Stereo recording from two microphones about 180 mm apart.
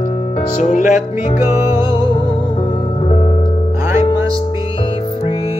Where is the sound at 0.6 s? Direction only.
45° left (ahead or behind).